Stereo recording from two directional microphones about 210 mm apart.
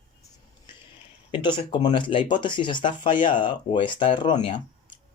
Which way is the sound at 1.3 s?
20° left (ahead or behind).